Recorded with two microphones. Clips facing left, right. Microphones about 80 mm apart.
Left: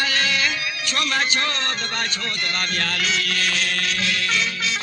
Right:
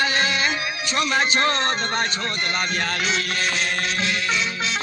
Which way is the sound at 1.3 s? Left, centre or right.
Right.